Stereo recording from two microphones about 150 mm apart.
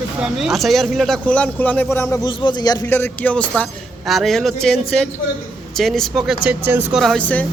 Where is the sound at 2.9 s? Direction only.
10° left (ahead or behind); by 7.0 s 10° right (ahead or behind).